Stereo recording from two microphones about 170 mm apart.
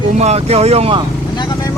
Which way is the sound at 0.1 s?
40° right (ahead or behind).